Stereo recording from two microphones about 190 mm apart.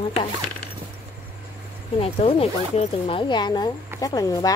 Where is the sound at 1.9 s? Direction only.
30° left (ahead or behind).